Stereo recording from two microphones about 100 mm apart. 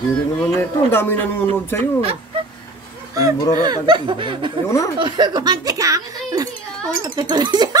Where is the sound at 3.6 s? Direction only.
45° right (ahead or behind).